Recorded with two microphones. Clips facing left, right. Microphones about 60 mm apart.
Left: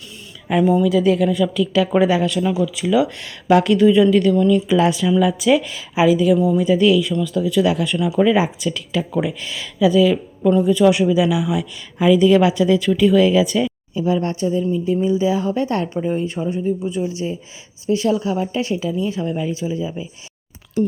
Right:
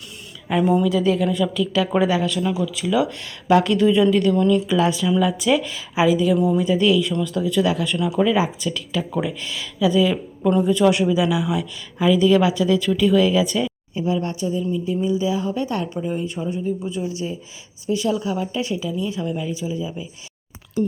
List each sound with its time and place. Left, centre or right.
0.4 s a woman's voice: centre
2.0 s speech: centre
10.1 s speech: centre
14.0 s speech: left
16.4 s speech: left
18.2 s speech: left